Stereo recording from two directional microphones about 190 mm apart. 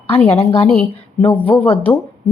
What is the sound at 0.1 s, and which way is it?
A woman's voice, 35° left (ahead or behind).